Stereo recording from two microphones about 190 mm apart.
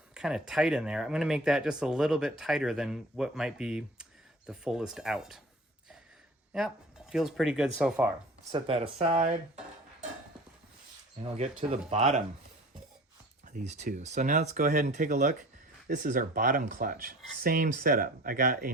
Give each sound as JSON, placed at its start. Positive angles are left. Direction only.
{"t": 0.1, "sound": "speech", "side_deg": -5}
{"t": 6.5, "sound": "speech", "side_deg": -5}
{"t": 8.5, "sound": "speech", "side_deg": -30}
{"t": 11.3, "sound": "speech", "side_deg": -35}
{"t": 13.6, "sound": "speech", "side_deg": -40}